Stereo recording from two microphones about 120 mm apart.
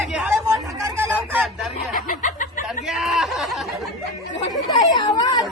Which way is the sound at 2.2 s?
90° left.